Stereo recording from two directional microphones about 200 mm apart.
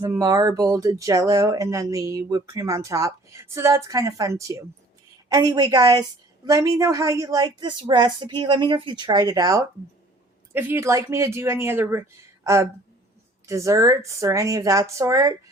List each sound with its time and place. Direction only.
0.0 s a woman's voice: 15° right (ahead or behind)